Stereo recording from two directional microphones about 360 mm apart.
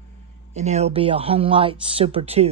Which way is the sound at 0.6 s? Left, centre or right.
Centre.